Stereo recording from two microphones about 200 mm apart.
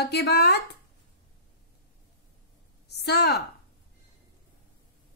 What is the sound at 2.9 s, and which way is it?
Speech, 55° left (ahead or behind).